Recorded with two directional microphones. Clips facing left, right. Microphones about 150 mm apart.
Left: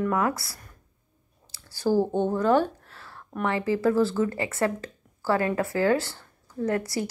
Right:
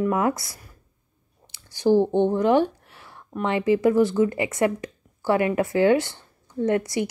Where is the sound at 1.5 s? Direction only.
20° right (ahead or behind).